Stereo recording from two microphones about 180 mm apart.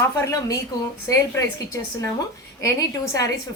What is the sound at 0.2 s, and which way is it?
A woman's voice, 20° left (ahead or behind).